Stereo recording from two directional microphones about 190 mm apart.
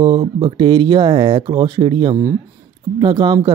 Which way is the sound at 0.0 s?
25° right (ahead or behind).